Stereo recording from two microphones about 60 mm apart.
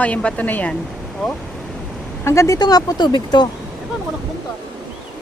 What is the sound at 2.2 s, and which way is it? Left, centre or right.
Speech, left.